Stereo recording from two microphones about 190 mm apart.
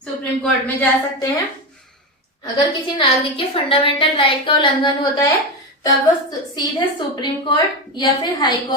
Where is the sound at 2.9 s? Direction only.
30° left (ahead or behind).